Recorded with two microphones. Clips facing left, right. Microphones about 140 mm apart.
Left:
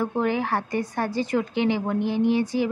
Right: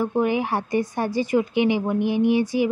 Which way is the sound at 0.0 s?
15° right (ahead or behind).